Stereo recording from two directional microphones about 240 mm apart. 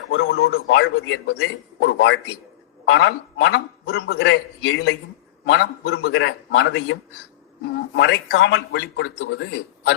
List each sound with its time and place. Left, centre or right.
0.3 s a man's voice: left